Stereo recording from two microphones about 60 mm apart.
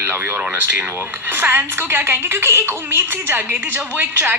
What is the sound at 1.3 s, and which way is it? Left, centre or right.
A woman's voice, right.